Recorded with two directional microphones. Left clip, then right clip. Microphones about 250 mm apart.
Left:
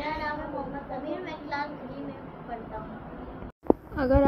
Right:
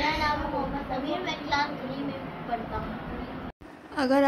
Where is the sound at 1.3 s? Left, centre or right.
Right.